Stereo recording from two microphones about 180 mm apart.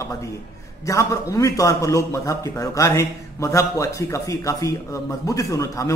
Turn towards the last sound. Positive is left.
turn(degrees=20)  # may be behind; listen again after turning